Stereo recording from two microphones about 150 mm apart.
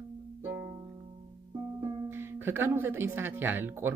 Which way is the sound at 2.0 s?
15° right (ahead or behind).